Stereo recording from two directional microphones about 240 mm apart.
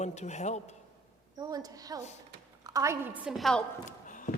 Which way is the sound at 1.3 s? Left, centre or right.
Centre.